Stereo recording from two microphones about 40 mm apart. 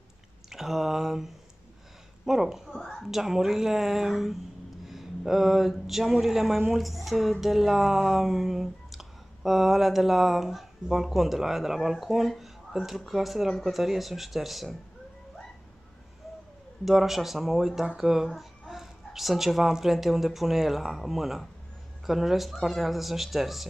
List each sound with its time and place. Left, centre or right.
0.5 s a woman's voice: centre
2.7 s a woman's voice: centre
3.0 s a woman's voice: centre
4.8 s music: centre
6.2 s a woman's voice: centre
16.8 s a woman's voice: centre